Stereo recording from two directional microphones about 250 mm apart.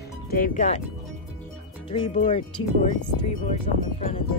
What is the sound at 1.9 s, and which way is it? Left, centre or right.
Speech, left.